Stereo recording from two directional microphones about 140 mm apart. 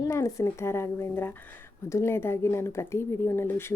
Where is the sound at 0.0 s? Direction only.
25° left (ahead or behind).